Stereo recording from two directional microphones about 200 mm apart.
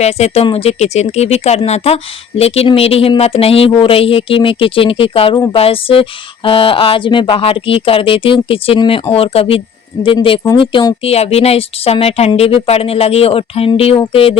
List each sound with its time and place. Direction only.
0.0 s speech: 30° left (ahead or behind)